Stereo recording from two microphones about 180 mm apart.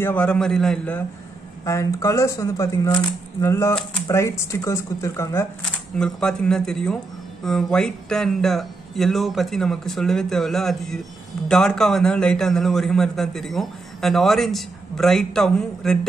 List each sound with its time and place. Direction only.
0.0 s speech: 10° left (ahead or behind)
1.6 s speech: 15° left (ahead or behind)
5.6 s a man's voice: 5° left (ahead or behind)